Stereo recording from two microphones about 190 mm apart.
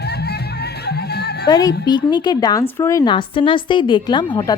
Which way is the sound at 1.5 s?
20° left (ahead or behind).